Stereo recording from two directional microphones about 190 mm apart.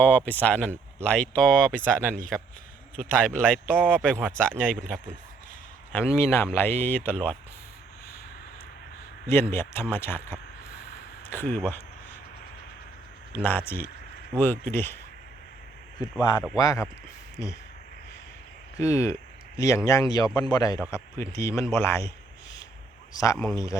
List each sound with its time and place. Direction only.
0.0 s speech: 10° left (ahead or behind)
9.3 s speech: 15° left (ahead or behind)
13.3 s speech: 10° left (ahead or behind)
16.6 s a man's voice: 20° left (ahead or behind)
18.8 s a man's voice: 15° left (ahead or behind)
23.1 s speech: 15° left (ahead or behind)